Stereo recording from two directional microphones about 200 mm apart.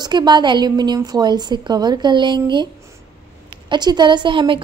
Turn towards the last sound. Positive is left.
turn(degrees=-25)  # may be behind; listen again after turning